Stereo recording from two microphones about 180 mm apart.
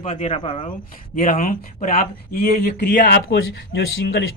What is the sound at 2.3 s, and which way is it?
A man's voice, 60° left (ahead or behind).